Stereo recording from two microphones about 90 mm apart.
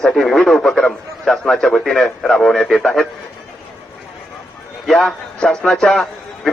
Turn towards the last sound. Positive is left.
turn(degrees=5)  # may be behind; listen again after turning